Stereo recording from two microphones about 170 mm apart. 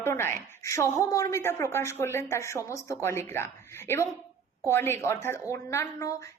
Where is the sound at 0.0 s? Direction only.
15° left (ahead or behind).